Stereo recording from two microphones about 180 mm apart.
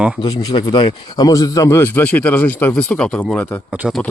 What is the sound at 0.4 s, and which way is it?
Speech, 25° left (ahead or behind).